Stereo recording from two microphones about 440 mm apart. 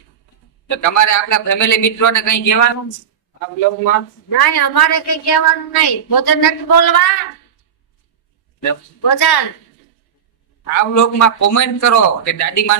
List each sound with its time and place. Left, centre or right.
0.8 s a man's voice: left
3.8 s a woman's voice: left
8.6 s a woman's voice: left
10.6 s a man's voice: left